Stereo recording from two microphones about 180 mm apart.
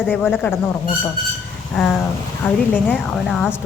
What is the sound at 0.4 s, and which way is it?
Speech, 10° left (ahead or behind).